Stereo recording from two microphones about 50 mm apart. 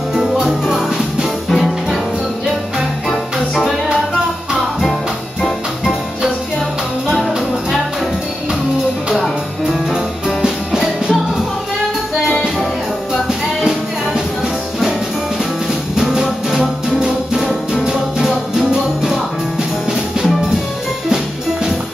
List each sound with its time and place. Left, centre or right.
0.1 s music: centre
3.1 s music: centre
9.1 s music: centre
10.4 s music: centre
12.3 s music: centre
16.0 s music: centre
19.9 s music: centre